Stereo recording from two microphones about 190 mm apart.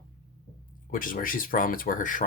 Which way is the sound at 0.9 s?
45° left (ahead or behind).